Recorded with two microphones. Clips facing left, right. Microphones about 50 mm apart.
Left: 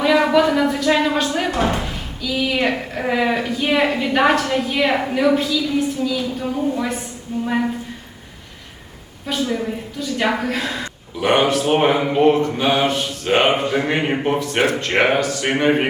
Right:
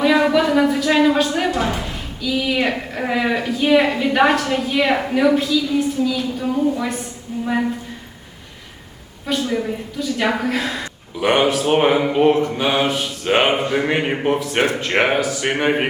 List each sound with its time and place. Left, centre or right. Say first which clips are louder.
0.2 s a woman's voice: even; centre
1.5 s a woman's voice: left 1 dB; left
2.2 s a woman's voice: even; centre
9.2 s a woman's voice: right 1 dB; centre